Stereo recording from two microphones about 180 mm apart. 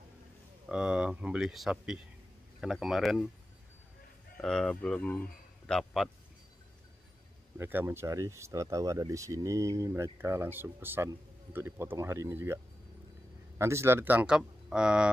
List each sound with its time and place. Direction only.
0.7 s speech: 5° right (ahead or behind)
4.4 s speech: 5° left (ahead or behind)
7.5 s speech: 15° right (ahead or behind)
13.6 s speech: 15° right (ahead or behind)